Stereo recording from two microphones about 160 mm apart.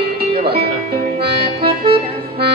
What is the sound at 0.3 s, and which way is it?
Music, 75° right (ahead or behind).